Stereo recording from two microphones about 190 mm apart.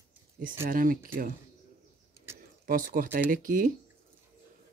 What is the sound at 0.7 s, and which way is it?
Speech, 45° right (ahead or behind).